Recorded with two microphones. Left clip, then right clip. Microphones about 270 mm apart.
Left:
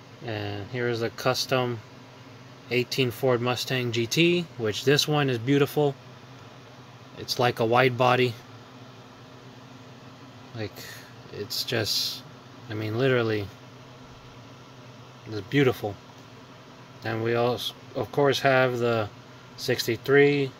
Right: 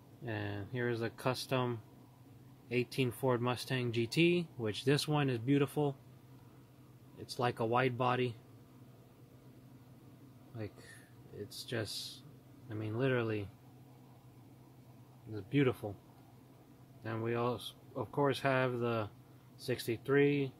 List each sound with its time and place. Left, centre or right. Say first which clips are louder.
0.2 s speech: left 8 dB; centre
7.3 s speech: left 11 dB; centre
10.6 s speech: left 12 dB; centre
15.3 s speech: left 10 dB; centre
17.0 s speech: left 11 dB; centre